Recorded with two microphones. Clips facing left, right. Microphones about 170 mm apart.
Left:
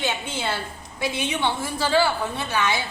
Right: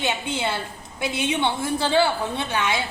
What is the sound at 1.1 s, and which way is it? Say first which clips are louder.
A woman's voice: right 3 dB; 20° right (ahead or behind).